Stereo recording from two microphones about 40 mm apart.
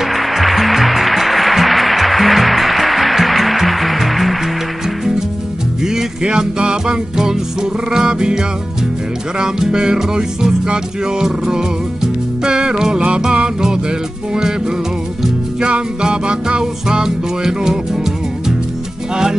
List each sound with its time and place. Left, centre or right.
0.0 s music: centre
5.8 s music: centre
15.6 s music: right